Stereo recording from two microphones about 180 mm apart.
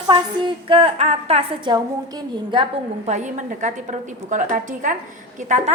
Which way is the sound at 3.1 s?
40° right (ahead or behind).